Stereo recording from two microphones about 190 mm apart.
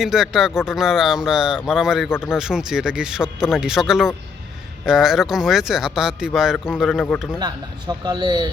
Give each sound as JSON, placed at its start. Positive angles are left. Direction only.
{"t": 0.0, "sound": "speech", "side_deg": 0}
{"t": 7.3, "sound": "a man's voice", "side_deg": -20}